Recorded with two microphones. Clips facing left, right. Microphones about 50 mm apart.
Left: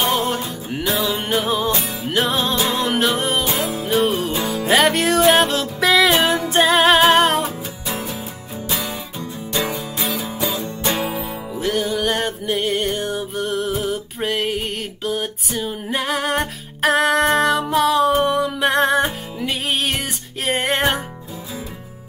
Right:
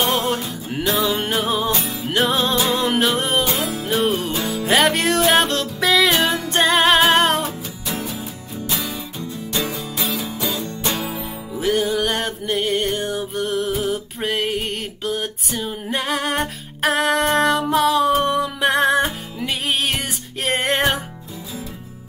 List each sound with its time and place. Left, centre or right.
0.0 s music: centre
10.2 s music: centre
10.9 s music: left
11.1 s music: centre